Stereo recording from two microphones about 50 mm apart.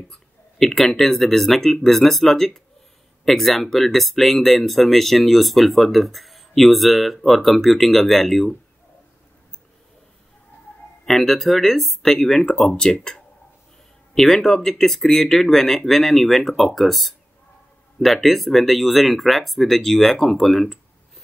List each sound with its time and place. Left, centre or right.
0.1 s speech: centre
11.1 s speech: centre